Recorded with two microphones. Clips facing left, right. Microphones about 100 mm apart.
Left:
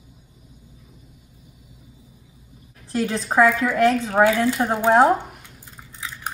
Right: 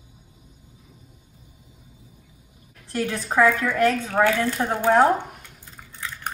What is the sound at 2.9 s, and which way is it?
Speech, 30° left (ahead or behind).